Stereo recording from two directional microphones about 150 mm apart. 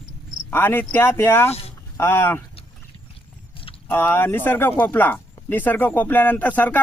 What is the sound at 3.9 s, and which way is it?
Speech, 15° left (ahead or behind).